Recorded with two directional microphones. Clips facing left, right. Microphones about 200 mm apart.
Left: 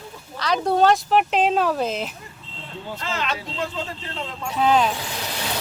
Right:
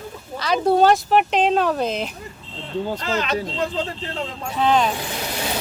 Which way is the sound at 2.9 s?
40° right (ahead or behind).